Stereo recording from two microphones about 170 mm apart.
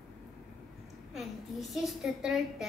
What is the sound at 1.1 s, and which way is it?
A woman's voice, centre (ahead or behind).